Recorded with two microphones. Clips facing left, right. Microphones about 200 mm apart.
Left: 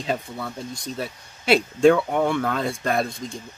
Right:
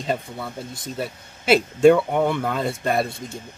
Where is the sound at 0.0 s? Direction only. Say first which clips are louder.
Right 1 dB; centre (ahead or behind).